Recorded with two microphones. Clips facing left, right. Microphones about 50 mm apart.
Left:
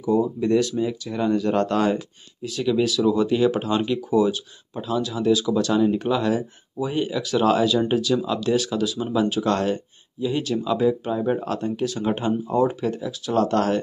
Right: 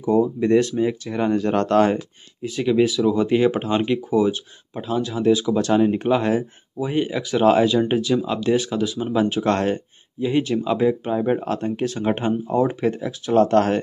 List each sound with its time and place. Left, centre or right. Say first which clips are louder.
0.4 s speech: right 3 dB; right
2.4 s speech: right 3 dB; right
6.9 s speech: right 2 dB; right